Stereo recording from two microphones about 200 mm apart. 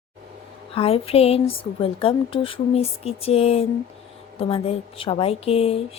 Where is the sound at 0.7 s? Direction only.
30° left (ahead or behind).